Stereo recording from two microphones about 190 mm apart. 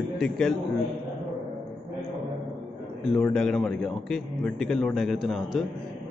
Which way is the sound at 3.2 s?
5° left (ahead or behind).